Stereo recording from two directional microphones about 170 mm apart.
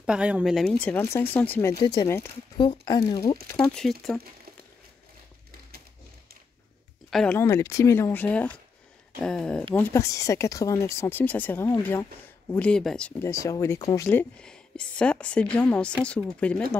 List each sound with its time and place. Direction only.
0.0 s speech: 5° right (ahead or behind); by 3.3 s 25° left (ahead or behind)
3.5 s speech: 5° left (ahead or behind)
7.1 s speech: centre (ahead or behind)
7.3 s speech: 15° left (ahead or behind)
13.2 s speech: 15° left (ahead or behind)
14.0 s speech: 5° left (ahead or behind)